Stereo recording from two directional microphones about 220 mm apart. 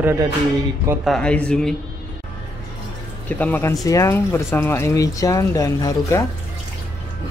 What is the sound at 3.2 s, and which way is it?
Speech, 10° left (ahead or behind).